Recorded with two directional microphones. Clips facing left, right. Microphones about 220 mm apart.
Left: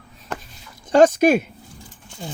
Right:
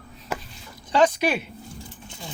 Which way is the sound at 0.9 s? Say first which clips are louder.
Left 7 dB; 45° left (ahead or behind).